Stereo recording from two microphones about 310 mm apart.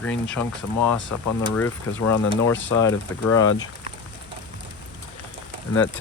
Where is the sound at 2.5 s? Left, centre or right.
Centre.